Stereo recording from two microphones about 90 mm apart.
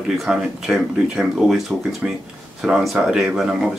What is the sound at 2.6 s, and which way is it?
Speech, 10° right (ahead or behind).